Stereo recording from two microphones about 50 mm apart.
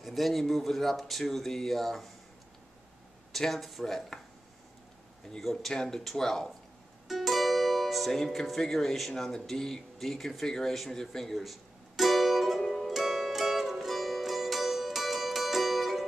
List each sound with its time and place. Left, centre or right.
0.0 s speech: centre
3.3 s speech: centre
5.4 s speech: centre
12.0 s music: centre